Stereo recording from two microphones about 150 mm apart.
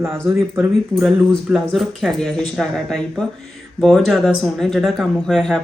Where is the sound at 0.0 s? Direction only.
15° right (ahead or behind).